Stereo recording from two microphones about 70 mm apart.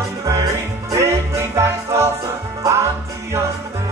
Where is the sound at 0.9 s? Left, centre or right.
Right.